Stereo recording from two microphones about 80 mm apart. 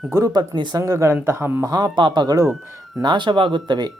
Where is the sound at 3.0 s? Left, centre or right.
Right.